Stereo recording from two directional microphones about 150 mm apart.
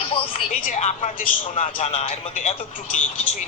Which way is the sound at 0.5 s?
60° left (ahead or behind).